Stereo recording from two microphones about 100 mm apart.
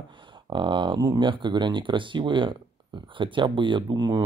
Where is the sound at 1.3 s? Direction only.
50° right (ahead or behind).